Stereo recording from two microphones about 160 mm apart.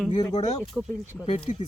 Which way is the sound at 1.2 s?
35° left (ahead or behind).